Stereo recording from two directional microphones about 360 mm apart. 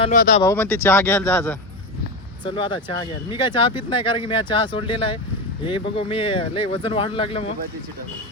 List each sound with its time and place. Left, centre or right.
0.0 s speech: left
0.4 s speech: centre